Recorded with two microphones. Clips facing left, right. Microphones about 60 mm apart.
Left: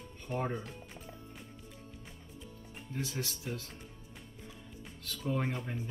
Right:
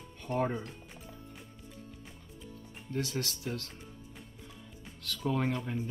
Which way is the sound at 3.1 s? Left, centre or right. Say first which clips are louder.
Right 3 dB; centre.